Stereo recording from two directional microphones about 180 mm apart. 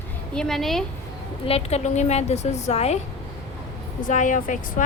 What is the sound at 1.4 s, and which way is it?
A woman's voice, 35° left (ahead or behind).